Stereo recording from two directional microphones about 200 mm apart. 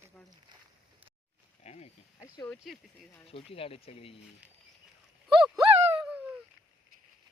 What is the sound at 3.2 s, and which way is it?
Speech, 30° left (ahead or behind).